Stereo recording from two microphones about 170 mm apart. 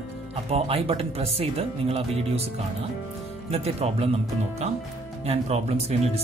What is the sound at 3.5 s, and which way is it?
Speech, 35° right (ahead or behind).